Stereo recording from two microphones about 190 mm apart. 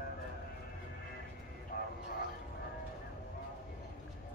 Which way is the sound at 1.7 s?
50° left (ahead or behind).